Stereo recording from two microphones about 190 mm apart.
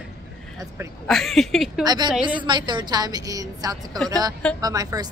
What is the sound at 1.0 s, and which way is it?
Speech, centre (ahead or behind).